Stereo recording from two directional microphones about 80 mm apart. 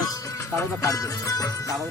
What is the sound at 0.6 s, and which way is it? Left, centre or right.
Speech, left.